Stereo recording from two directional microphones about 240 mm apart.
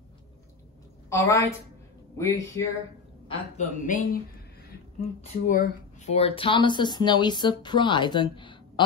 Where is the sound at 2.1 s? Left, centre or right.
Centre.